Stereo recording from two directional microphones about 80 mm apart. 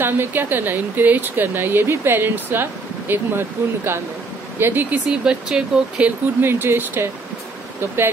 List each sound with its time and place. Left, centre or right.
0.0 s speech: right
5.0 s speech: centre
6.4 s speech: right